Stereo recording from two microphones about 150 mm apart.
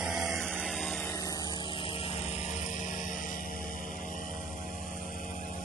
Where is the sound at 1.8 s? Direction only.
35° left (ahead or behind); by 3.3 s 55° left (ahead or behind).